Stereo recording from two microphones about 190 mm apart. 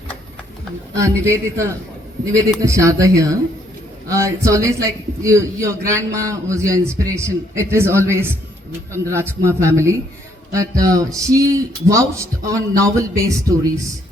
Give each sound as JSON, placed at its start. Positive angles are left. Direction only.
{"t": 0.9, "sound": "a man's voice", "side_deg": -15}